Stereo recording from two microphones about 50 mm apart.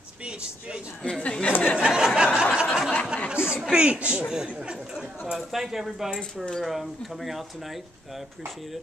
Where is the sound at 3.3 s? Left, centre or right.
Centre.